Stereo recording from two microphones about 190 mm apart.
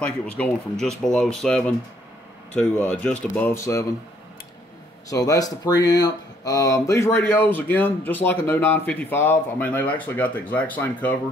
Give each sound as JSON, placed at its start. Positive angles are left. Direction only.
{"t": 0.0, "sound": "speech", "side_deg": 5}
{"t": 5.1, "sound": "speech", "side_deg": 20}